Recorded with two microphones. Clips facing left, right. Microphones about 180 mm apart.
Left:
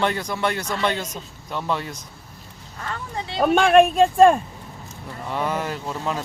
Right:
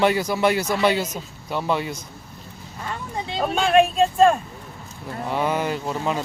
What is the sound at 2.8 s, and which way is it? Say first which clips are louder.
Speech: right 1 dB; 15° right (ahead or behind).